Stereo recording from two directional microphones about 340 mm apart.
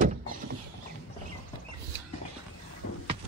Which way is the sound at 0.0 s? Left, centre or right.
Right.